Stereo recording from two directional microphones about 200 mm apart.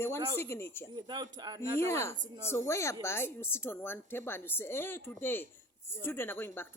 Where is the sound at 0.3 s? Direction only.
15° left (ahead or behind).